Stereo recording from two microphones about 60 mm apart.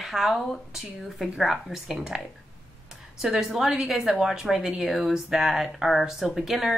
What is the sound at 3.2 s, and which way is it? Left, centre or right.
A woman's voice, centre.